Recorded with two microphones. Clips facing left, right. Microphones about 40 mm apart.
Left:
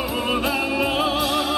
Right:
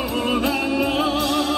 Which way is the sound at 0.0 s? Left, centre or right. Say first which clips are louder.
Right 1 dB; centre.